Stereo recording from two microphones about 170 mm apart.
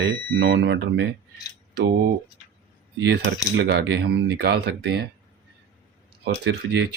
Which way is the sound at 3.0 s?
85° right.